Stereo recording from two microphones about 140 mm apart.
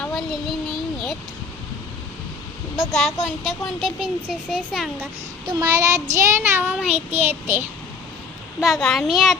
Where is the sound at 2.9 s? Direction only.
Centre (ahead or behind).